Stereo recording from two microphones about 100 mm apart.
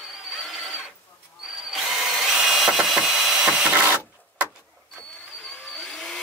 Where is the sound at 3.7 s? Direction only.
20° right (ahead or behind).